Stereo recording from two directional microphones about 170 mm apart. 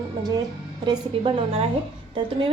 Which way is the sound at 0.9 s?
30° right (ahead or behind).